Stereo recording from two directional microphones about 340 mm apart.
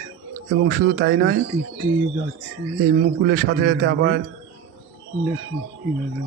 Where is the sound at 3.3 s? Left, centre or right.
Right.